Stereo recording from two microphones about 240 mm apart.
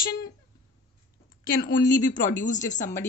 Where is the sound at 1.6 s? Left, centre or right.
Left.